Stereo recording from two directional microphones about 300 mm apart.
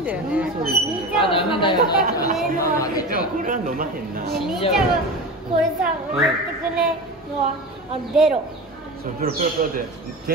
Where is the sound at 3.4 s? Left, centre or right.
Right.